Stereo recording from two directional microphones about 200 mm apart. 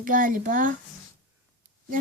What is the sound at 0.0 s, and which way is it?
Speech, 40° right (ahead or behind).